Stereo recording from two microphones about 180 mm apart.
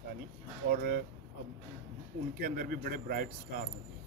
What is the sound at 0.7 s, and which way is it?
Speech, 55° right (ahead or behind).